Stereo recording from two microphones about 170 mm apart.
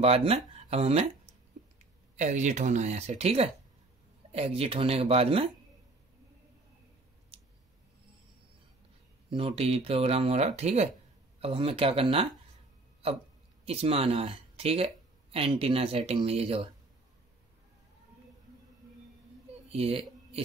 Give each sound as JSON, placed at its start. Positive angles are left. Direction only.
{"t": 0.0, "sound": "speech", "side_deg": -35}
{"t": 9.3, "sound": "speech", "side_deg": -35}
{"t": 13.7, "sound": "speech", "side_deg": -35}
{"t": 19.7, "sound": "speech", "side_deg": -35}